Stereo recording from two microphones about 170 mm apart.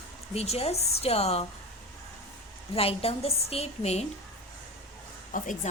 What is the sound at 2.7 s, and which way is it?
A woman's voice, 35° left (ahead or behind).